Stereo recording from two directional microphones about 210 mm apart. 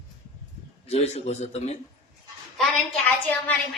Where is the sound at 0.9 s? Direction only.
30° left (ahead or behind).